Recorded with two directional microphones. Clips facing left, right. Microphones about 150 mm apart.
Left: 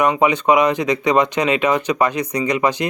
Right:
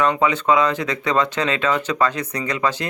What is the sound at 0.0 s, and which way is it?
Speech, 15° left (ahead or behind).